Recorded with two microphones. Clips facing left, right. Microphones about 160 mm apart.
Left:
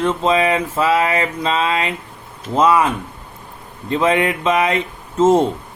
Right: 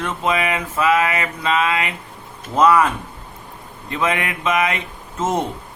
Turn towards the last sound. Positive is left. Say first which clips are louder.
# left 8 dB
turn(degrees=30)  # may be behind; listen again after turning